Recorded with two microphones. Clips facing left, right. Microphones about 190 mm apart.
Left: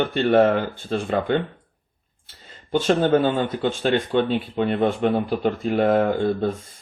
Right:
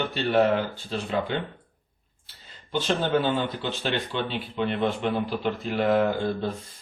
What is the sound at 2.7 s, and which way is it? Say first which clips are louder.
Speech: left 6 dB; 50° left (ahead or behind).